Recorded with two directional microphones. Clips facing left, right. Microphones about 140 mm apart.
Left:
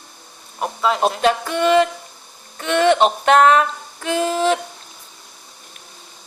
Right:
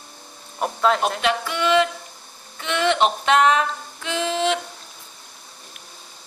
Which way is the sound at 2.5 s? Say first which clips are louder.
Left 5 dB; 45° left (ahead or behind).